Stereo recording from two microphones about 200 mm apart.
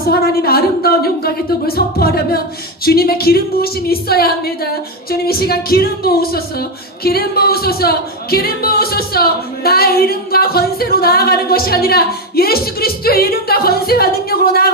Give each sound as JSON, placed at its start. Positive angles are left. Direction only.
{"t": 0.0, "sound": "speech", "side_deg": 50}